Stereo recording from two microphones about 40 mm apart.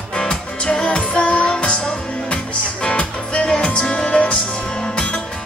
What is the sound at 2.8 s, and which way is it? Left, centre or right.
Music, left.